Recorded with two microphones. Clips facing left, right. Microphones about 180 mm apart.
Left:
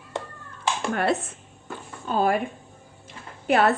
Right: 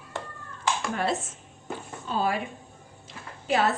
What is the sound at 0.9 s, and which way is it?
A woman's voice, 60° left (ahead or behind).